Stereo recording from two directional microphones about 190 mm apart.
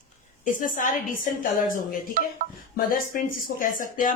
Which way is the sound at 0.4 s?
45° left (ahead or behind).